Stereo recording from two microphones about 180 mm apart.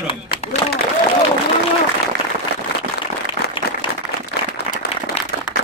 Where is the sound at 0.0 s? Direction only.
30° left (ahead or behind).